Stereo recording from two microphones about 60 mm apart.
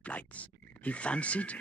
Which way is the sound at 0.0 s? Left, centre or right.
Left.